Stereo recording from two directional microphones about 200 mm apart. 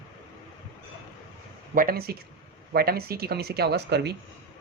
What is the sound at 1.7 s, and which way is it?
Speech, 45° right (ahead or behind).